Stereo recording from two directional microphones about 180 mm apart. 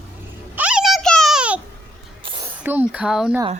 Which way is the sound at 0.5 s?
5° right (ahead or behind).